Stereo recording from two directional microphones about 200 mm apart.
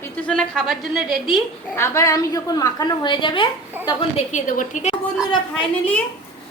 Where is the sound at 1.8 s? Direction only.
15° left (ahead or behind).